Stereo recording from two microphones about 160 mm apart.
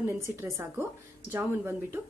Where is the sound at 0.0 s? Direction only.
15° right (ahead or behind).